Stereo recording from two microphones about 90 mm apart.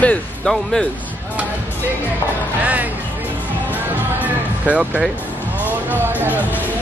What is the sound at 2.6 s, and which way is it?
Music, 15° right (ahead or behind).